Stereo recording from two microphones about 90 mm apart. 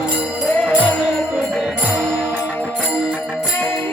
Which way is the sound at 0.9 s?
5° left (ahead or behind).